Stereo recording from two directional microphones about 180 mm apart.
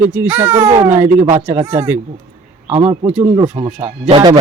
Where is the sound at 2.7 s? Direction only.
35° right (ahead or behind).